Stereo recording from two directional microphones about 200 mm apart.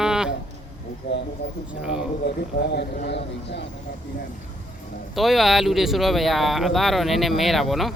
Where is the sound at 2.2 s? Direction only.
55° left (ahead or behind).